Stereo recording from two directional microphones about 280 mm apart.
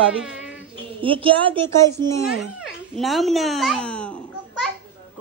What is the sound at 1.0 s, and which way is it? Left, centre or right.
Speech, centre.